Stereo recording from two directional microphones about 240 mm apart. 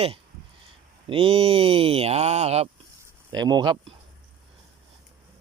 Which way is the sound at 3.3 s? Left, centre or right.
Centre.